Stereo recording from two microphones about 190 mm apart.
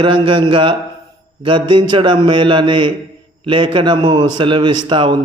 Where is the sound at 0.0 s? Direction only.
25° right (ahead or behind).